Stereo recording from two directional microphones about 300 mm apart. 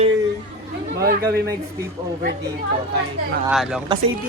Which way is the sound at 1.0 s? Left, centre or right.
Right.